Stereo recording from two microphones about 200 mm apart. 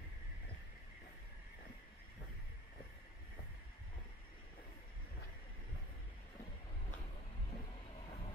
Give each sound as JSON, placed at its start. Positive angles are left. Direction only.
{"t": 7.5, "sound": "vehicle", "side_deg": 30}